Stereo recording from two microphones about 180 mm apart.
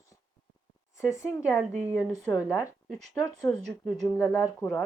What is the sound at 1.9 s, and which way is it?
Speech, 20° left (ahead or behind).